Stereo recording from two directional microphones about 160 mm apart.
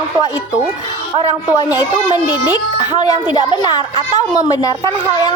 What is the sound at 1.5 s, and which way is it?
Speech, 20° left (ahead or behind).